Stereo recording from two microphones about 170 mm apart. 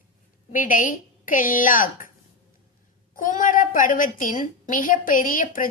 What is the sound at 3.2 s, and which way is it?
A woman's voice, 50° left (ahead or behind).